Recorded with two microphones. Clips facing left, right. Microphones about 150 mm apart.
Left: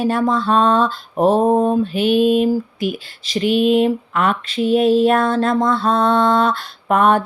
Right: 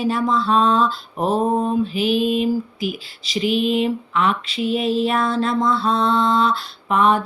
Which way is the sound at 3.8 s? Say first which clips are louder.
Left 3 dB; 45° left (ahead or behind).